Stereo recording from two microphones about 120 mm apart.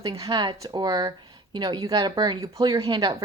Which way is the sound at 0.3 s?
40° right (ahead or behind).